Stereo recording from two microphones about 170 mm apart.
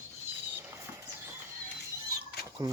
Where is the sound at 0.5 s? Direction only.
15° right (ahead or behind).